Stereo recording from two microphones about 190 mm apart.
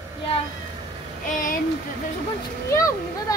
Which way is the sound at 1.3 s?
45° left (ahead or behind).